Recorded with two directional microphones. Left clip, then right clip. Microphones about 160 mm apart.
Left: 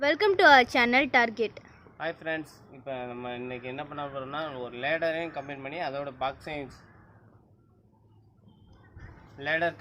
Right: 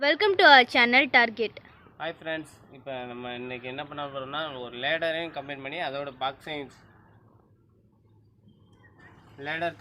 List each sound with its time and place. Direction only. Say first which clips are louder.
0.0 s a woman's voice: right 1 dB; 5° left (ahead or behind); by 6.7 s 40° left (ahead or behind)
9.4 s a man's voice: left 3 dB; 20° left (ahead or behind)